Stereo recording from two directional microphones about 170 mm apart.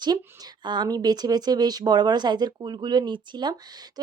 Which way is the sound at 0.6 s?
25° right (ahead or behind).